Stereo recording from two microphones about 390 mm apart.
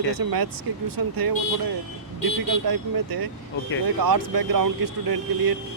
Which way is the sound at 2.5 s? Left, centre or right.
Right.